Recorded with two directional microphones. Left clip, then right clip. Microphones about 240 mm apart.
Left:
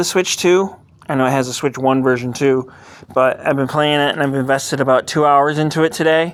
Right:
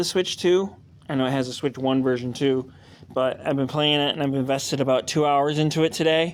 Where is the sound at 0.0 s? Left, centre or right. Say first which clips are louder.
Left 7 dB; left.